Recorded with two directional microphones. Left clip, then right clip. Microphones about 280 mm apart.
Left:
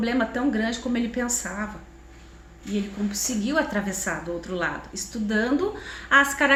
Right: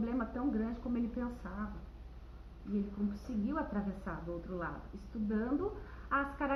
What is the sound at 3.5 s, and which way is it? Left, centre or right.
Speech, centre.